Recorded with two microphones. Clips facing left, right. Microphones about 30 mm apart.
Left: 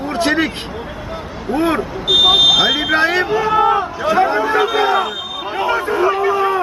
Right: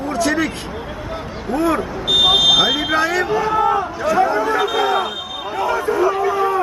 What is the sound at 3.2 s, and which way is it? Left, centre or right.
Speech, left.